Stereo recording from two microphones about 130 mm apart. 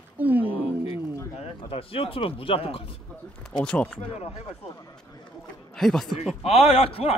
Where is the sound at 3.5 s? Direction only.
10° left (ahead or behind).